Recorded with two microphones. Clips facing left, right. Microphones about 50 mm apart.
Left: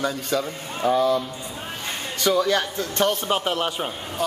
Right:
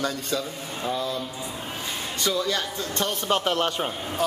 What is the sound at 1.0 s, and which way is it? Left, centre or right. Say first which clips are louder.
Speech: left 9 dB; left.